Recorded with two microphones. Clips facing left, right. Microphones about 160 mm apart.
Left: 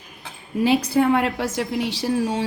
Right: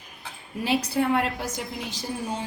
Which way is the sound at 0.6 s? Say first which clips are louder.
Left 6 dB; 90° left.